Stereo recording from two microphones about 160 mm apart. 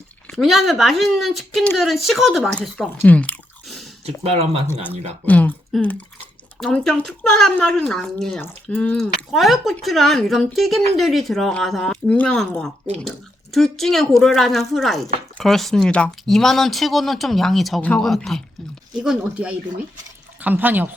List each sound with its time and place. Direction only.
0.3 s speech: centre (ahead or behind)
4.0 s speech: 40° right (ahead or behind)
4.7 s speech: 10° left (ahead or behind); by 20.9 s 10° right (ahead or behind)